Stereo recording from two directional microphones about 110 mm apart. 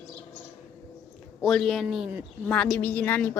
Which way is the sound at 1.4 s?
5° left (ahead or behind).